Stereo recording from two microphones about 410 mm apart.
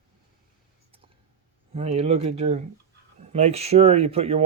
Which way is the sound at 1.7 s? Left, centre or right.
Centre.